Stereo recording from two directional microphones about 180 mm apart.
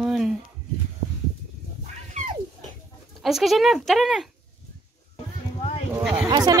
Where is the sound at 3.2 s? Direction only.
Centre (ahead or behind).